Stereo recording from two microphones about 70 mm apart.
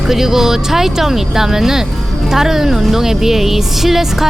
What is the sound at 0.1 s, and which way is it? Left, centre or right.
A woman's voice, centre.